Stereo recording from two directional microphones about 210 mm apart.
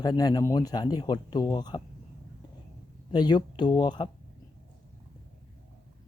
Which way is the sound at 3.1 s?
20° left (ahead or behind).